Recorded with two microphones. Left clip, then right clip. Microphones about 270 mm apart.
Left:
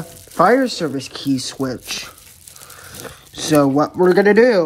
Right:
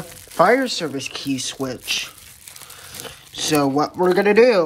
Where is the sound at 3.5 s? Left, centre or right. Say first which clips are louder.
Left 4 dB; centre.